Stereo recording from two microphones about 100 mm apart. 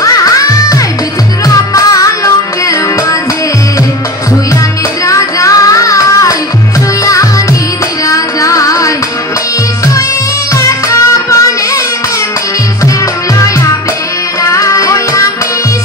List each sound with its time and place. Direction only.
0.0 s music: 35° left (ahead or behind)
5.0 s child singing: 35° left (ahead or behind)
8.1 s music: 35° left (ahead or behind)
10.5 s music: 30° left (ahead or behind)
14.4 s music: 30° left (ahead or behind)